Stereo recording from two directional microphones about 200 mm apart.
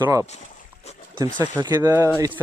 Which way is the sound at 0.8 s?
30° left (ahead or behind).